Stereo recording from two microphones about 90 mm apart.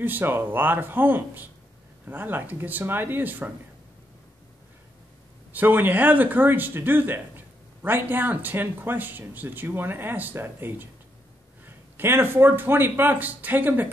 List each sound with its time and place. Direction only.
0.0 s speech: 20° right (ahead or behind)
5.5 s speech: 20° right (ahead or behind)